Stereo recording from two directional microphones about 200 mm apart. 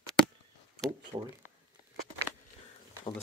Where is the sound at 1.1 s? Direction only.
25° right (ahead or behind).